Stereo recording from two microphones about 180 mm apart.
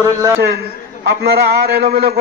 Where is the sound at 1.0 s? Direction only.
60° right (ahead or behind).